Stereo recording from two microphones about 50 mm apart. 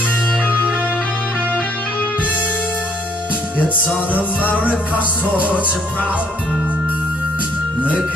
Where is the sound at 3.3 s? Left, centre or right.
Left.